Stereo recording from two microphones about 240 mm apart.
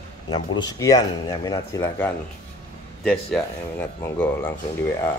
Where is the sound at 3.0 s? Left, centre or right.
Centre.